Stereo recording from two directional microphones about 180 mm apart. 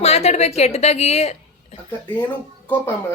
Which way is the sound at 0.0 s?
35° left (ahead or behind).